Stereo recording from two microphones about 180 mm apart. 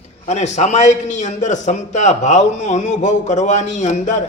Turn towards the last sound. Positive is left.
turn(degrees=40)  # may be behind; listen again after turning